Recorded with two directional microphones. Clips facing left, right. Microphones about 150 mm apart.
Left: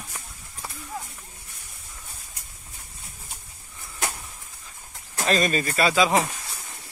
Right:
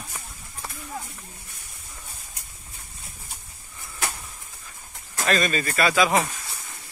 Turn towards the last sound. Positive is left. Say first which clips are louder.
# even
turn(degrees=25)  # may be behind; listen again after turning